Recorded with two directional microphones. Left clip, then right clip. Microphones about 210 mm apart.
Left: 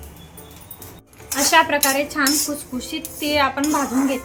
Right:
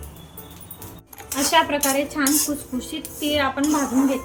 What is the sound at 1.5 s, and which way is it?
Speech, 15° left (ahead or behind).